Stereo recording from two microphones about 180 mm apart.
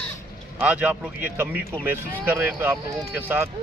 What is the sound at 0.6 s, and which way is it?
A man's voice, 5° right (ahead or behind).